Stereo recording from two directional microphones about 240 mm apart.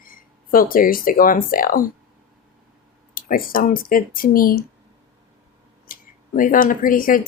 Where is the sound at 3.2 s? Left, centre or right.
Left.